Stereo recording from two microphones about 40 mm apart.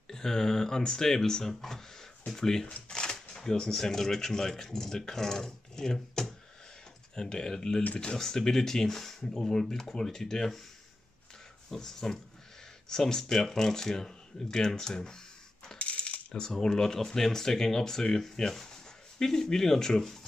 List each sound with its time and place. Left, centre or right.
0.1 s speech: centre
11.7 s speech: centre
15.8 s coin: left
16.5 s speech: centre